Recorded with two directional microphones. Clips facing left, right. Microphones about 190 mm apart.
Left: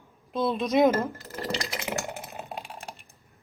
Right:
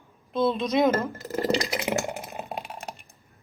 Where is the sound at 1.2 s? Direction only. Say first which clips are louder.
Right 7 dB; 15° right (ahead or behind).